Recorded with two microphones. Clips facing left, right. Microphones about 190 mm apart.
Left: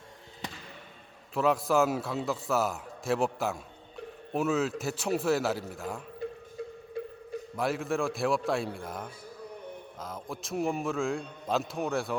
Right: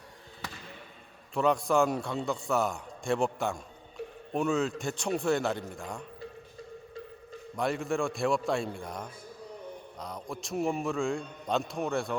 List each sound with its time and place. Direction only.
1.3 s a man's voice: centre (ahead or behind)
7.0 s a sound: 60° left (ahead or behind)
7.5 s a man's voice: centre (ahead or behind)